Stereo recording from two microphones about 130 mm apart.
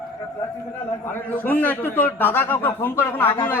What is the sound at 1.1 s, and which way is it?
A man's voice, 15° left (ahead or behind).